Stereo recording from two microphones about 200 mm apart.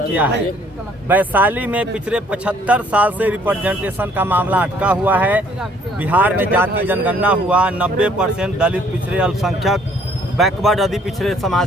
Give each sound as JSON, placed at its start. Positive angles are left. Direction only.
{"t": 1.0, "sound": "speech", "side_deg": -10}